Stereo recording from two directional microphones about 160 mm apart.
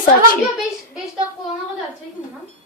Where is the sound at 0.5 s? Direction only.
5° right (ahead or behind).